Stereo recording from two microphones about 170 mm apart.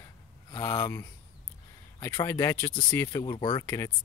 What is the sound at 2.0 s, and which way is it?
Speech, 15° left (ahead or behind).